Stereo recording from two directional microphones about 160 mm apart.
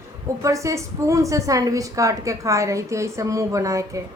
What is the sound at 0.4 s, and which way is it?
A woman's voice, 20° right (ahead or behind).